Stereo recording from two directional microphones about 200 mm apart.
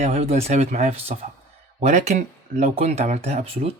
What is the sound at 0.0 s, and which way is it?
Speech, 35° right (ahead or behind).